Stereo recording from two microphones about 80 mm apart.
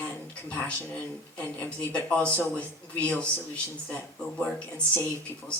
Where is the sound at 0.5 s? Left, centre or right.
Centre.